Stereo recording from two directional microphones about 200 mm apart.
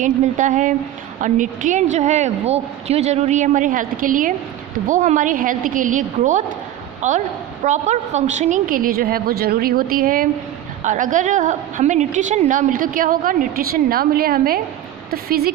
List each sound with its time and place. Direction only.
0.0 s a woman's voice: 40° right (ahead or behind)